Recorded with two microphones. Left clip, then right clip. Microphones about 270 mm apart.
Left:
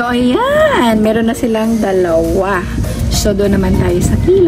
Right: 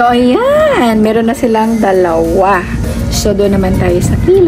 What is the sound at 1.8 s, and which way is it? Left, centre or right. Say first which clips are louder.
Speech: right 1 dB; centre.